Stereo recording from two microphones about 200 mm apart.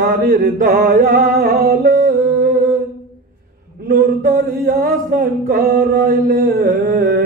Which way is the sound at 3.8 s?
45° right (ahead or behind).